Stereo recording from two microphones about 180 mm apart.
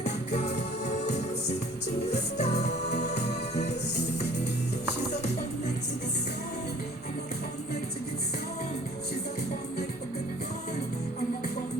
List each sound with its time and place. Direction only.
0.0 s music: 40° left (ahead or behind)